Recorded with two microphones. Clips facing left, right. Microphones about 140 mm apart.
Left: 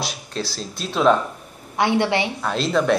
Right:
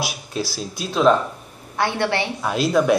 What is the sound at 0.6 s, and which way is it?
Speech, centre (ahead or behind).